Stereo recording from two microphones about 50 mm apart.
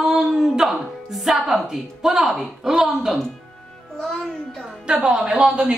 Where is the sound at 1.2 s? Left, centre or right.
Centre.